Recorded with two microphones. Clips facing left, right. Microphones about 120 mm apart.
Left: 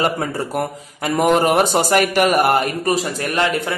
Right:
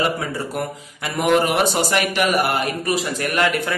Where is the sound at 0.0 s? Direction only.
45° left (ahead or behind).